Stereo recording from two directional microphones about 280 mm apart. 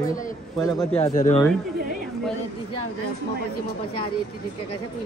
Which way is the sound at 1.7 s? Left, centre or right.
Right.